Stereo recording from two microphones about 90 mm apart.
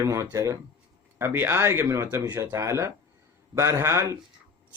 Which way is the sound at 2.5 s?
35° right (ahead or behind).